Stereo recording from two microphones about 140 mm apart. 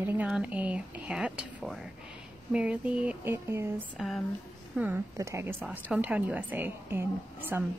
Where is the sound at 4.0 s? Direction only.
Centre (ahead or behind).